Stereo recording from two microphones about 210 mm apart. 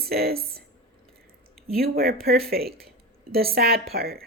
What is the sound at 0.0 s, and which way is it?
Speech, 45° right (ahead or behind).